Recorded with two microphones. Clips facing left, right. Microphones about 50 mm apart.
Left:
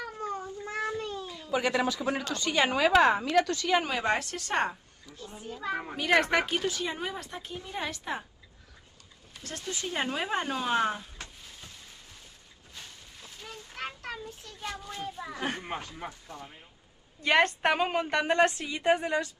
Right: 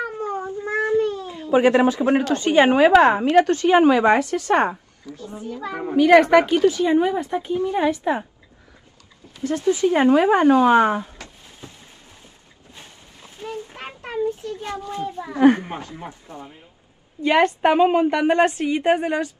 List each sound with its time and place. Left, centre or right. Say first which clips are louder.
0.0 s cat: right 9 dB; right
1.2 s a woman's voice: right 9 dB; right
5.0 s a woman's voice: right 9 dB; right
6.1 s a woman's voice: right 10 dB; centre
9.4 s a woman's voice: right 18 dB; right
11.0 s a sound: right 12 dB; right
13.4 s child singing: right 8 dB; right
15.3 s a woman's voice: right 19 dB; right
17.6 s a woman's voice: right 11 dB; centre; by 19.3 s right